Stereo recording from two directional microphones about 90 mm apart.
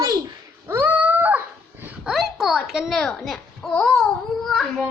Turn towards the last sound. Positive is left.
turn(degrees=0)  # may be behind; listen again after turning